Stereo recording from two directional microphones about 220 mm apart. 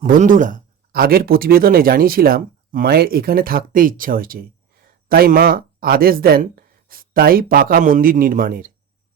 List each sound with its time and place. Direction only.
0.0 s speech: 35° right (ahead or behind)